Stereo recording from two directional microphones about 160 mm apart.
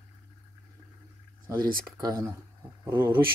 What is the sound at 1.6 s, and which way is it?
Speech, 60° right (ahead or behind).